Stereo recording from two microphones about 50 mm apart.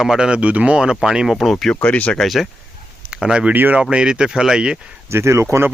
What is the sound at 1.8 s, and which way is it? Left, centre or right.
Speech, left.